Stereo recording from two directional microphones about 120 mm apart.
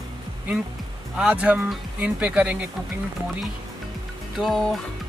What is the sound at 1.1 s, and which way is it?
Speech, 10° right (ahead or behind).